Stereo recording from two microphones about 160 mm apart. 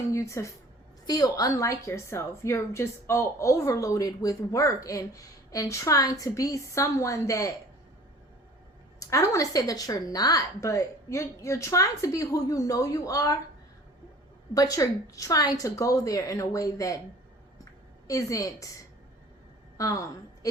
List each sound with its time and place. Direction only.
0.1 s a woman's voice: 20° left (ahead or behind)
9.0 s a woman's voice: 20° left (ahead or behind)
14.5 s a woman's voice: 20° left (ahead or behind)
18.1 s a woman's voice: 20° left (ahead or behind)
19.7 s a woman's voice: 20° left (ahead or behind)